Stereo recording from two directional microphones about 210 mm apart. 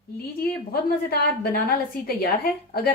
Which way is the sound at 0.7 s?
45° left (ahead or behind).